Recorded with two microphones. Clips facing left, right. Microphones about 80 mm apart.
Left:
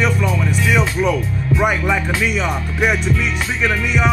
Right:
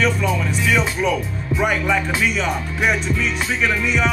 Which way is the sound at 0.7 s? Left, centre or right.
Centre.